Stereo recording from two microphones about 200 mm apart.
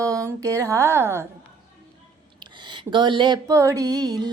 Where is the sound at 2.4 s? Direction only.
25° right (ahead or behind).